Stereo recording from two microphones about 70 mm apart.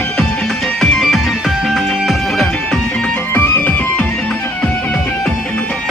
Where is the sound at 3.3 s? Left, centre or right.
Left.